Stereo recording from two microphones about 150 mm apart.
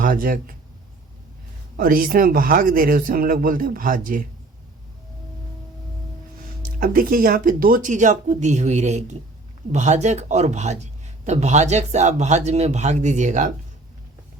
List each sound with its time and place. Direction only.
0.0 s speech: 70° right (ahead or behind)
1.7 s a man's voice: 70° right (ahead or behind)
6.7 s speech: 70° right (ahead or behind); by 13.5 s 55° right (ahead or behind)